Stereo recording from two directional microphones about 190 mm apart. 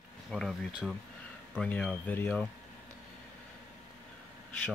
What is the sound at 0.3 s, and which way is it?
Speech, centre (ahead or behind).